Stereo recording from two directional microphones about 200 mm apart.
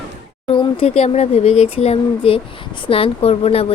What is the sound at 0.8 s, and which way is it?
Speech, 30° left (ahead or behind).